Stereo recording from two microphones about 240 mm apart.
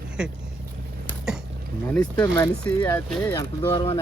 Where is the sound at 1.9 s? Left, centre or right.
Centre.